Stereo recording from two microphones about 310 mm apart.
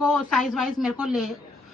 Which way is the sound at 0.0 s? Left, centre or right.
Centre.